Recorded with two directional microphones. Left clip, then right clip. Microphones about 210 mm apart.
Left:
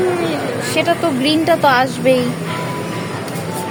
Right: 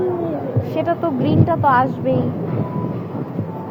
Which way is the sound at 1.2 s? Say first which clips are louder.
Left 4 dB; 30° left (ahead or behind).